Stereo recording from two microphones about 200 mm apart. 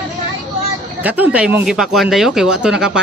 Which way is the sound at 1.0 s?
10° right (ahead or behind).